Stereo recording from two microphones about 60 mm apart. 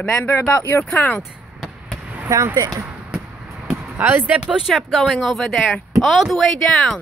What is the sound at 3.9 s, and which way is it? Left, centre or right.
Speech, right.